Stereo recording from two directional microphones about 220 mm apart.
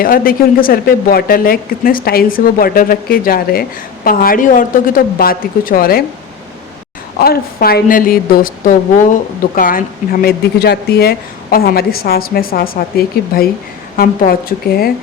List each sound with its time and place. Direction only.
0.0 s speech: 40° left (ahead or behind)
7.2 s speech: 45° left (ahead or behind)